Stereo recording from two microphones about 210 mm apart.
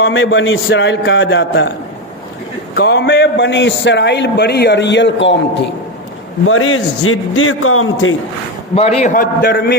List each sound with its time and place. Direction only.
0.0 s a man's voice: 70° left (ahead or behind)
2.7 s a man's voice: 50° left (ahead or behind)
6.4 s a man's voice: 75° left (ahead or behind)
8.7 s a man's voice: 30° left (ahead or behind)